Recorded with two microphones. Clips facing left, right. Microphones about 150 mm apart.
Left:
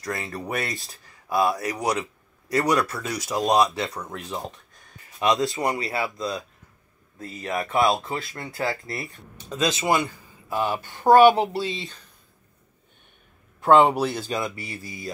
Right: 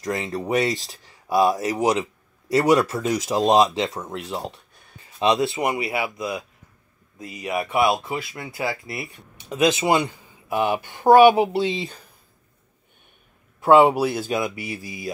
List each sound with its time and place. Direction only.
0.0 s speech: 20° right (ahead or behind)
13.6 s speech: 10° right (ahead or behind)